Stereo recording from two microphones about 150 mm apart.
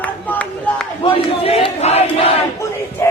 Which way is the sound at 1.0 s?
40° left (ahead or behind).